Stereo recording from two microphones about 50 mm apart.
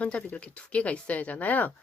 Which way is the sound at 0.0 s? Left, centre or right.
Left.